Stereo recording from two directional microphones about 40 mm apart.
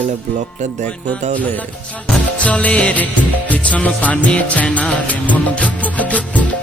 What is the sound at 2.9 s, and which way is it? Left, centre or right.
Music, left.